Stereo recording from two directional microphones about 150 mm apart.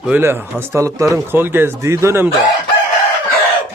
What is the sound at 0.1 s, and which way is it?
Speech, 15° right (ahead or behind).